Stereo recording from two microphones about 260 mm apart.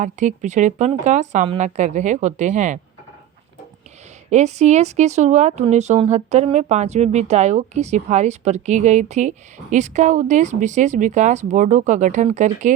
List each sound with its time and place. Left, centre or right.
0.0 s speech: right
4.3 s speech: right